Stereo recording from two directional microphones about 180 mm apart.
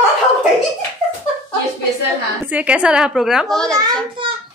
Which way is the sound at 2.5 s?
5° right (ahead or behind).